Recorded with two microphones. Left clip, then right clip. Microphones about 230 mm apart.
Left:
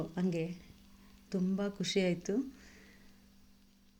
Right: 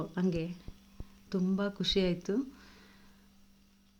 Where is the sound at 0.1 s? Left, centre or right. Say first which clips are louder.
Right 2 dB; centre.